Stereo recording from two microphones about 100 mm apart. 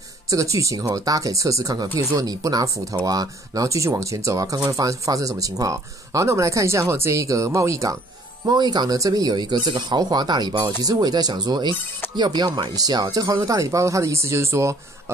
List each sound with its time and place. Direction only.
0.3 s speech: 35° right (ahead or behind)
8.5 s speech: 45° right (ahead or behind); by 14.8 s 30° right (ahead or behind)